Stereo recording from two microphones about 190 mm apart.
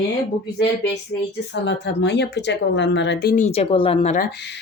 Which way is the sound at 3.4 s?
35° left (ahead or behind).